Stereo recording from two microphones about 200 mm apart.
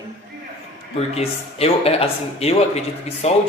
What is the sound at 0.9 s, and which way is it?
Speech, 30° left (ahead or behind).